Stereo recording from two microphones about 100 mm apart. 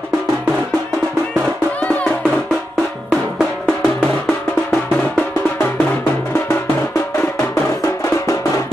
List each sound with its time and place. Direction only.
1.8 s music: 15° left (ahead or behind)
3.1 s music: 10° left (ahead or behind)